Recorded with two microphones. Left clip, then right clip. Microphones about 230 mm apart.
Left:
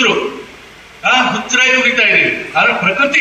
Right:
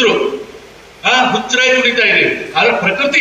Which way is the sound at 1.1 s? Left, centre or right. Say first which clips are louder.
Right 1 dB; centre.